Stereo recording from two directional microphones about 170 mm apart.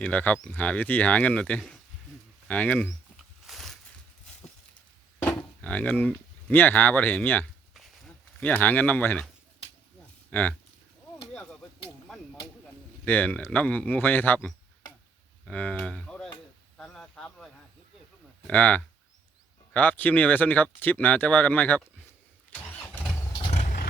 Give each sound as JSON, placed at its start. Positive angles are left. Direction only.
{"t": 0.0, "sound": "speech", "side_deg": 10}
{"t": 3.4, "sound": "a sound", "side_deg": 0}
{"t": 5.2, "sound": "speech", "side_deg": 10}
{"t": 7.7, "sound": "a sound", "side_deg": 0}
{"t": 10.3, "sound": "speech", "side_deg": 10}
{"t": 13.1, "sound": "speech", "side_deg": 10}
{"t": 16.7, "sound": "a sound", "side_deg": 0}
{"t": 18.4, "sound": "speech", "side_deg": 10}
{"t": 22.7, "sound": "vehicle", "side_deg": 10}
{"t": 23.4, "sound": "vehicle", "side_deg": 40}